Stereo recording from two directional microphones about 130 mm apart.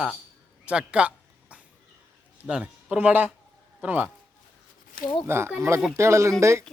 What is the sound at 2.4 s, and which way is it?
Speech, 5° right (ahead or behind).